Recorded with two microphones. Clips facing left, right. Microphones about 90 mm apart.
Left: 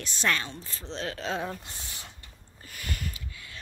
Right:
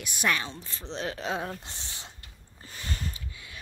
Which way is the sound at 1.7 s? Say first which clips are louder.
Even; 25° right (ahead or behind).